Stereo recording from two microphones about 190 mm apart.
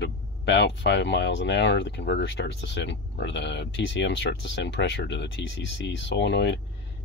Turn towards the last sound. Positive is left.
turn(degrees=65)  # may be behind; listen again after turning